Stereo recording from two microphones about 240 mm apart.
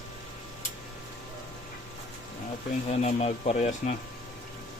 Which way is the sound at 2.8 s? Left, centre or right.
Left.